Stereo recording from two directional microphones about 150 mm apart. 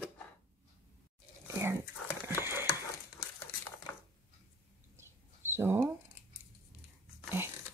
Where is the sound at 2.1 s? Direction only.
15° right (ahead or behind).